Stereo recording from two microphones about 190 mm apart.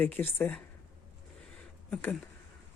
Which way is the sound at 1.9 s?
10° left (ahead or behind).